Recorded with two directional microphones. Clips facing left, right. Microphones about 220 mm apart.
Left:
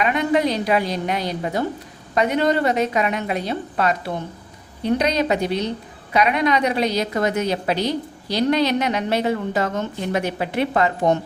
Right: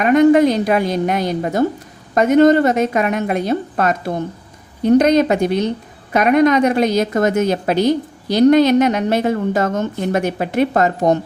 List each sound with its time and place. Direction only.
0.0 s a woman's voice: 45° right (ahead or behind)